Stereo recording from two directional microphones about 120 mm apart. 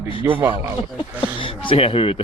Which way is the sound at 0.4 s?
30° right (ahead or behind).